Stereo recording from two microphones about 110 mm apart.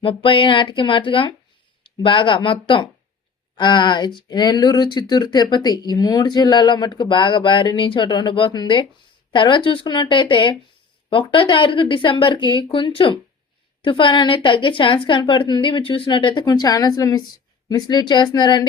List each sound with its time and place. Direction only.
0.0 s speech: 50° left (ahead or behind)